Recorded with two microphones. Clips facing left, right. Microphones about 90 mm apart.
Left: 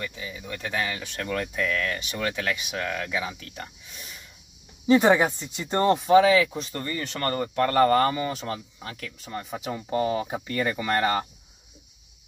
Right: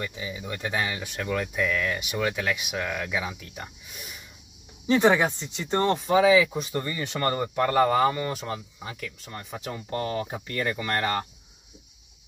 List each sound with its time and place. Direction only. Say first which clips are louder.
0.0 s speech: right 2 dB; 10° right (ahead or behind)
4.8 s speech: left 2 dB; 10° left (ahead or behind); by 6.7 s 5° right (ahead or behind)
6.7 s speech: right 2 dB; 15° right (ahead or behind)
7.6 s speech: left 1 dB; 5° right (ahead or behind)